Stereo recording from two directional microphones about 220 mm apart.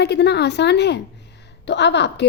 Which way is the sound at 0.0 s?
50° left (ahead or behind).